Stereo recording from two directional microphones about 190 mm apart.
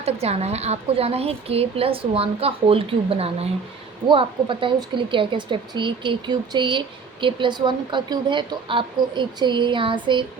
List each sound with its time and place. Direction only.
0.0 s a woman's voice: 35° right (ahead or behind)